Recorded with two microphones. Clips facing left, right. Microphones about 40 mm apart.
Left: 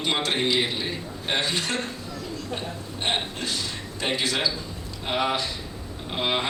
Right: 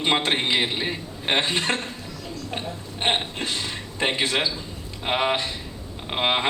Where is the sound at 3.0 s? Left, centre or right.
Right.